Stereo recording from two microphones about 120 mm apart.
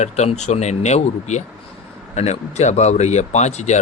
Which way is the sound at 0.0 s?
70° left (ahead or behind).